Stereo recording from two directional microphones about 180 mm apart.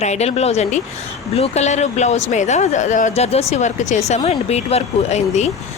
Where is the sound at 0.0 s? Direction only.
40° left (ahead or behind).